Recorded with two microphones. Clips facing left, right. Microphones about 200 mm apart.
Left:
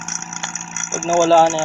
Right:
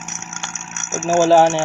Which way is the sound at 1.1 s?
15° right (ahead or behind).